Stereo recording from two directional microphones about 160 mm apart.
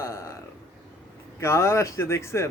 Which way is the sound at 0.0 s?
20° left (ahead or behind).